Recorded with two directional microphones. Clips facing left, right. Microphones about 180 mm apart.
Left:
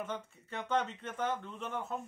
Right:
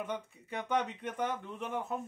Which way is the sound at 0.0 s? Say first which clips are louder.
Right 2 dB; 15° right (ahead or behind).